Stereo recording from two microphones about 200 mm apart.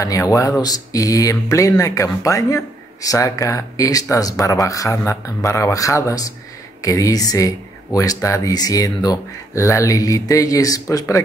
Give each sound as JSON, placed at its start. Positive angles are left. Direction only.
{"t": 0.0, "sound": "speech", "side_deg": 15}